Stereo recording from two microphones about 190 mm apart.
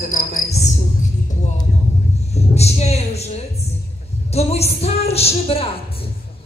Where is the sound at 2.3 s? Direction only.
35° left (ahead or behind).